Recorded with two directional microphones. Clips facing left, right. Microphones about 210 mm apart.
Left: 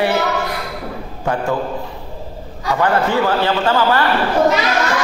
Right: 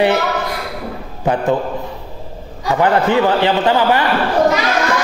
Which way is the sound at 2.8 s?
20° right (ahead or behind).